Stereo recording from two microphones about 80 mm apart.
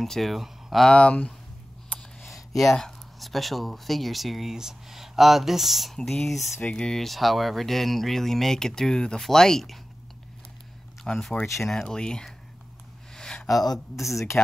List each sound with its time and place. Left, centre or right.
0.0 s speech: centre
0.8 s speech: centre
6.6 s speech: centre
11.1 s speech: centre
13.1 s a sound: centre
13.9 s speech: centre